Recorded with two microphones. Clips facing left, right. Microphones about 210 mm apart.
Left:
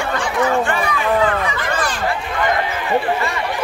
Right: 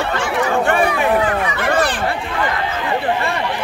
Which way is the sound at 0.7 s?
60° right (ahead or behind).